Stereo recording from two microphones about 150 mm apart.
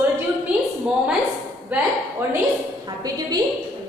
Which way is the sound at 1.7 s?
15° right (ahead or behind).